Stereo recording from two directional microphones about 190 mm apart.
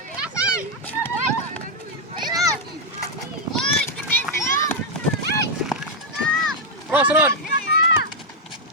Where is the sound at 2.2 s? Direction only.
20° right (ahead or behind).